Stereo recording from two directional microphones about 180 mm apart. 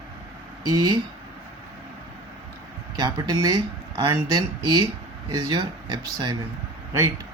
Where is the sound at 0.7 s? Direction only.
20° right (ahead or behind).